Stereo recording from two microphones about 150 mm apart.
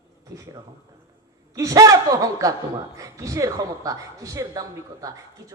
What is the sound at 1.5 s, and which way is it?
Speech, 20° right (ahead or behind).